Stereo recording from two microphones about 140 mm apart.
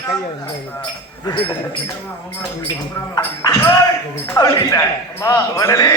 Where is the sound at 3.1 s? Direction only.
25° left (ahead or behind).